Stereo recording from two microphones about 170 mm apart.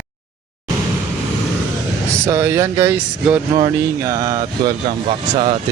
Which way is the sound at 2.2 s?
15° right (ahead or behind).